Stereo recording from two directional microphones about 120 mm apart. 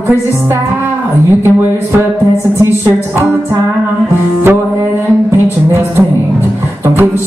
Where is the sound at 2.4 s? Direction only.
20° right (ahead or behind).